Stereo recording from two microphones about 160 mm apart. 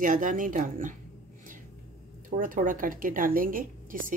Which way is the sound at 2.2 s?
60° right (ahead or behind).